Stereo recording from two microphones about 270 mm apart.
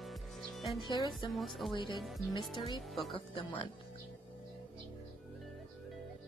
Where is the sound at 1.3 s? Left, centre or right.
Centre.